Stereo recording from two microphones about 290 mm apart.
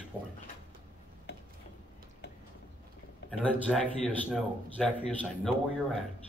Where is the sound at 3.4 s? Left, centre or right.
Centre.